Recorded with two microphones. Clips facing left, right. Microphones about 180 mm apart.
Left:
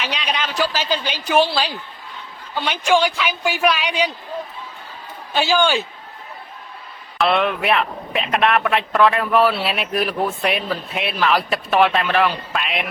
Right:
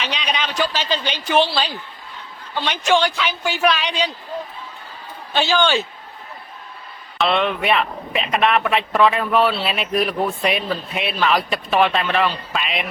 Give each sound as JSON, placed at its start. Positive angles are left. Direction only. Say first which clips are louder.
{"t": 0.0, "sound": "a man's voice", "louder": "even", "side_deg": 0}
{"t": 5.3, "sound": "a man's voice", "louder": "left 1 dB", "side_deg": 10}
{"t": 7.2, "sound": "speech", "louder": "left 1 dB", "side_deg": 0}